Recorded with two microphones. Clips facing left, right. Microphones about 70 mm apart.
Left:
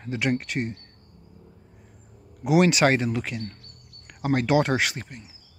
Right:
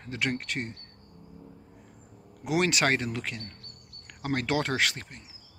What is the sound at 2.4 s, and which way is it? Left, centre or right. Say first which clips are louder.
Speech: left 7 dB; centre.